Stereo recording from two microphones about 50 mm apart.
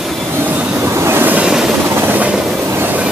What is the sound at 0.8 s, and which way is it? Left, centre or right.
Train, right.